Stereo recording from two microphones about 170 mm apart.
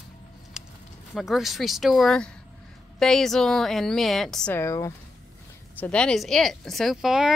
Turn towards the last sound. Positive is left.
turn(degrees=0)  # may be behind; listen again after turning